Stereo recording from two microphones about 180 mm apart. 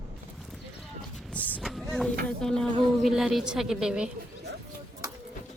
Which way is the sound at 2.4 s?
Centre (ahead or behind).